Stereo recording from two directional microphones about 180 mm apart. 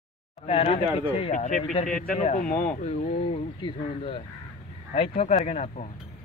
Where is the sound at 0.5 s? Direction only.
30° left (ahead or behind).